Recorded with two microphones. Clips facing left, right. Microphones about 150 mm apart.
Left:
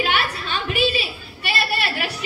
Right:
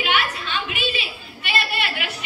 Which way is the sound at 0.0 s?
40° left (ahead or behind).